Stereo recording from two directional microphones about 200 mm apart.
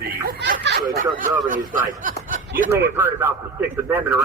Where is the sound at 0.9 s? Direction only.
40° right (ahead or behind).